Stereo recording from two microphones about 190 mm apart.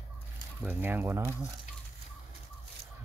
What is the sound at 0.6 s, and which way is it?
Speech, 10° right (ahead or behind).